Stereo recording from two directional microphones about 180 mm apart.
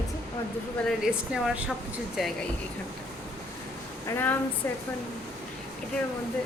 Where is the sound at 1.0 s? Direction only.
5° right (ahead or behind).